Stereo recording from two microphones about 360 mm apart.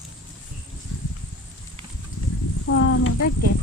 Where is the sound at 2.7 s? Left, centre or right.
Left.